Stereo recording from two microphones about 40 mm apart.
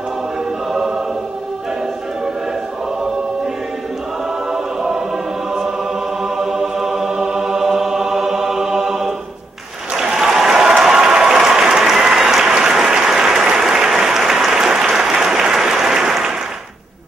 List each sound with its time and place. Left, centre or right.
4.5 s choir: centre
6.2 s music: centre
10.2 s applause: centre